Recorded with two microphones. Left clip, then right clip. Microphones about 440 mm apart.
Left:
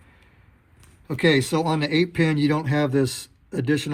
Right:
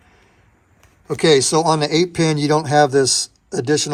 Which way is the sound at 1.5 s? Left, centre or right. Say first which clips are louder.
Right 7 dB; centre.